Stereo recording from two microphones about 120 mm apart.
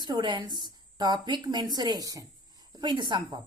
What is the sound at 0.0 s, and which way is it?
Speech, 40° right (ahead or behind).